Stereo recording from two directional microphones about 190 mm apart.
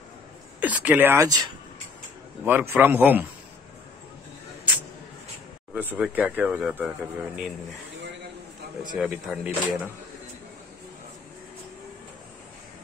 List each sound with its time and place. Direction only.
0.6 s speech: 10° right (ahead or behind)
5.8 s speech: 10° right (ahead or behind)
8.9 s speech: 5° right (ahead or behind)